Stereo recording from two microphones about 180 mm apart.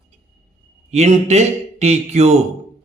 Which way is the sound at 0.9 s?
40° right (ahead or behind).